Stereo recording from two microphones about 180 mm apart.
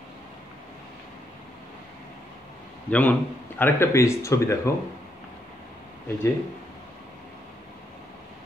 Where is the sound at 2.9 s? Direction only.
5° left (ahead or behind).